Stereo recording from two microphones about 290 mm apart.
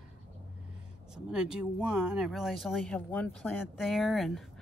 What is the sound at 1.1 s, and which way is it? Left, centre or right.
Speech, centre.